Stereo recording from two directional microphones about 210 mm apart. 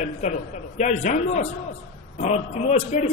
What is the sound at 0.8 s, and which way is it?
A man's voice, 35° left (ahead or behind).